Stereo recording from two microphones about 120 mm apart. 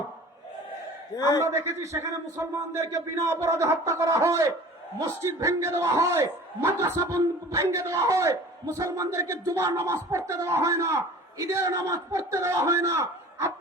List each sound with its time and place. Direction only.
1.1 s a man's voice: 30° left (ahead or behind)
1.4 s a man's voice: 25° right (ahead or behind)